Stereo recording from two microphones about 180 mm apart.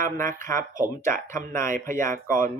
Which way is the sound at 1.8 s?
15° left (ahead or behind).